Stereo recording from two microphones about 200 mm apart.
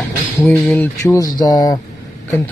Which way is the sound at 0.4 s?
10° left (ahead or behind).